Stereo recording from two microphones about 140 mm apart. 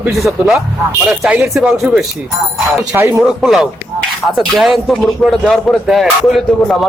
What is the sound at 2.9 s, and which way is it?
Speech, 15° right (ahead or behind).